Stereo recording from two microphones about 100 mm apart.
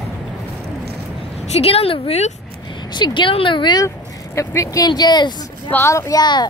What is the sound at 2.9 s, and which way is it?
Speech, 50° left (ahead or behind).